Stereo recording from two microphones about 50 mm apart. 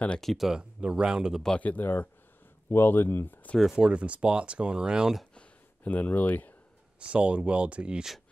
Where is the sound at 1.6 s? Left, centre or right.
Left.